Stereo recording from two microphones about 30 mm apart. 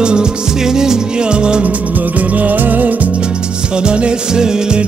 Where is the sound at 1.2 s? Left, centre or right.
Right.